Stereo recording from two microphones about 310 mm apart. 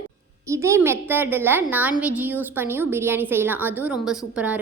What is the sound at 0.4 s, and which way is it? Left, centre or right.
A woman's voice, centre.